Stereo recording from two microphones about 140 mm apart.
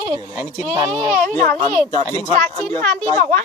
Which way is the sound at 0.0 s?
35° right (ahead or behind).